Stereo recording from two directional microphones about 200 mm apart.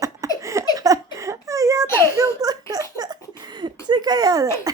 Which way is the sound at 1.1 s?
15° right (ahead or behind).